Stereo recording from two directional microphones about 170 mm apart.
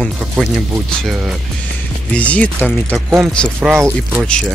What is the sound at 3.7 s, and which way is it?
Speech, 10° right (ahead or behind).